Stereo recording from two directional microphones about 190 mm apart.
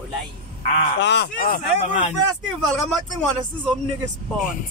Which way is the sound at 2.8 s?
5° left (ahead or behind).